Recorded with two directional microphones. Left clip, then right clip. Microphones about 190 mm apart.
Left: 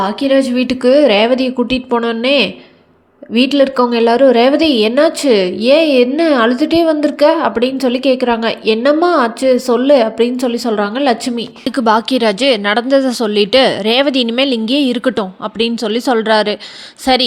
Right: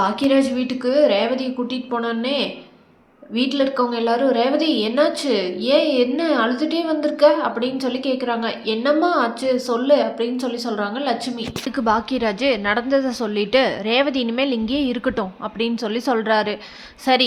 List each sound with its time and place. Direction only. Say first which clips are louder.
0.0 s a woman's voice: left 5 dB; 25° left (ahead or behind)